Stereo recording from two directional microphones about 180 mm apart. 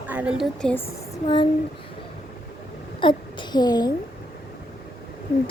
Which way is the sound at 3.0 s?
25° left (ahead or behind).